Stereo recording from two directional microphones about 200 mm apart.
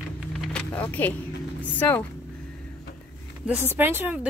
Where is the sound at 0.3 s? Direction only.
5° left (ahead or behind).